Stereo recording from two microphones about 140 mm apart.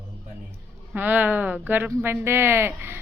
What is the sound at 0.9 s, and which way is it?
Speech, 15° right (ahead or behind).